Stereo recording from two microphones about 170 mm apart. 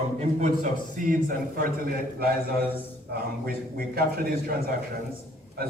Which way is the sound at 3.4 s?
60° right (ahead or behind).